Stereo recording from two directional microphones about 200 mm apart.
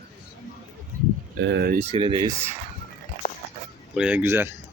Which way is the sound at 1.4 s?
55° right (ahead or behind).